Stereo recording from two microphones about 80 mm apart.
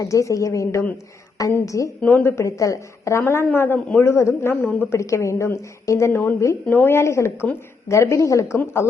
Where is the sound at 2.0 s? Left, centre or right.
Left.